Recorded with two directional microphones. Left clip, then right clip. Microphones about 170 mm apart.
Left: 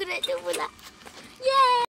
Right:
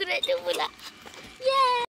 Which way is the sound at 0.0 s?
90° left.